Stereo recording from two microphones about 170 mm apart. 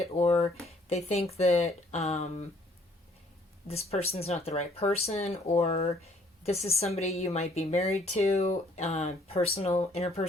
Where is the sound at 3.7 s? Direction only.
35° left (ahead or behind).